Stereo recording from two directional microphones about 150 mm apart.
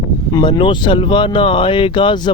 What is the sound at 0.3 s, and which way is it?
Speech, 30° left (ahead or behind).